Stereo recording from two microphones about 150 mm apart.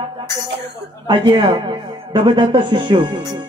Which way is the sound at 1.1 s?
35° right (ahead or behind).